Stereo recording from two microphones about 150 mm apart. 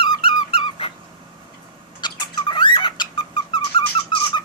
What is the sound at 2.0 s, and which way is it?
Cat, 30° left (ahead or behind).